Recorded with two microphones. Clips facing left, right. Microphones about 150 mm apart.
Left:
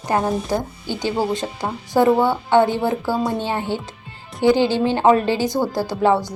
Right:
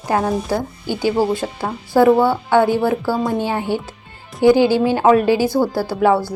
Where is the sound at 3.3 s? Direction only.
15° right (ahead or behind).